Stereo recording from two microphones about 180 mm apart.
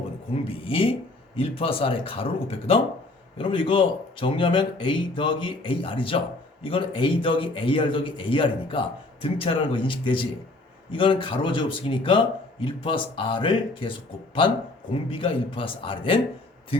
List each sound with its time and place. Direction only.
0.4 s a man's voice: 30° left (ahead or behind)
15.1 s a man's voice: 30° left (ahead or behind)